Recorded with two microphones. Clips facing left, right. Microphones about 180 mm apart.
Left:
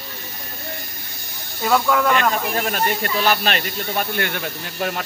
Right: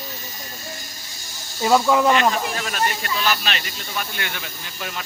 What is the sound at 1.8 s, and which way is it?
Speech, 20° right (ahead or behind).